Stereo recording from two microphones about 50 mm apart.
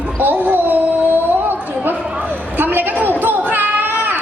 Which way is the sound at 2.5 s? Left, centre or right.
Right.